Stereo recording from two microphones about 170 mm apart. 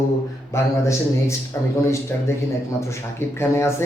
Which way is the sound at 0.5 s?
15° left (ahead or behind).